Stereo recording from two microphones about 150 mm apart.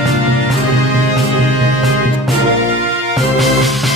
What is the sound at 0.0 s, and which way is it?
Music, centre (ahead or behind).